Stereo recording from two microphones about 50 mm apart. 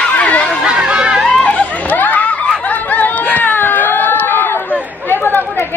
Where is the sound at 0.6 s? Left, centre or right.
Centre.